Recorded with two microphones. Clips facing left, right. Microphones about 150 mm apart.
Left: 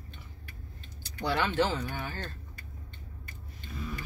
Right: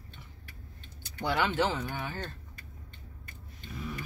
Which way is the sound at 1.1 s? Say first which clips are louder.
Left 1 dB; 15° right (ahead or behind).